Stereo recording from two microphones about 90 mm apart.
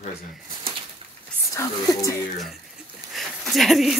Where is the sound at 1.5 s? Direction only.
35° left (ahead or behind).